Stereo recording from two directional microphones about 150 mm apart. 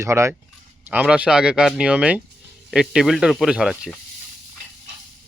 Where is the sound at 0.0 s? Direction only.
15° right (ahead or behind); by 3.9 s centre (ahead or behind).